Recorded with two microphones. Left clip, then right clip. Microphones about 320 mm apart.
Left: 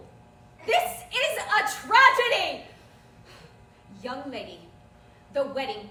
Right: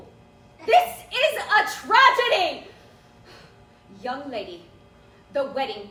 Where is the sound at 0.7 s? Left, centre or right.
Centre.